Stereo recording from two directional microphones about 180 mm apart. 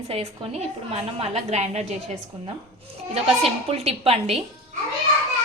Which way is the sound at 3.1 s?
35° right (ahead or behind).